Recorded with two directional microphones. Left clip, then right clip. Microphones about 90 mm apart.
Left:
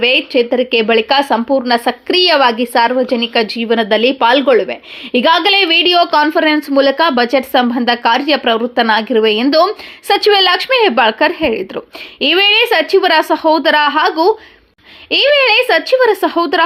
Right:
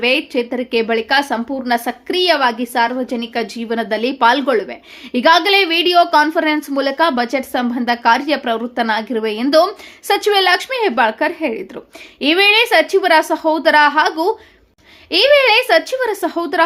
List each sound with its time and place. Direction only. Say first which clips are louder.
0.0 s speech: left 5 dB; 35° left (ahead or behind)
12.2 s speech: left 2 dB; 35° left (ahead or behind)